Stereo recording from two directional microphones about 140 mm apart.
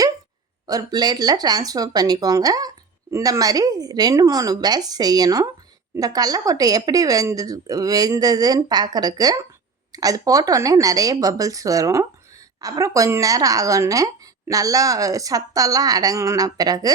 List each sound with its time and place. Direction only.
0.7 s speech: 30° right (ahead or behind)